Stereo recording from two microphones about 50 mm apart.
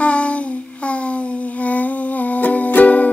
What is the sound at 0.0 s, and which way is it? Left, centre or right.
Child singing, left.